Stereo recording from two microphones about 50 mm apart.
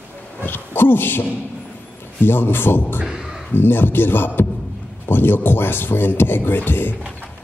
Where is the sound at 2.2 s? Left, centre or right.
Left.